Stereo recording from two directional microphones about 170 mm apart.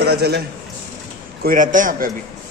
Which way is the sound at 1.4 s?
50° right (ahead or behind).